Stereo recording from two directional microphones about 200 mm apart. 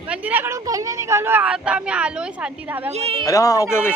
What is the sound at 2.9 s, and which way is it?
Speech, 30° right (ahead or behind).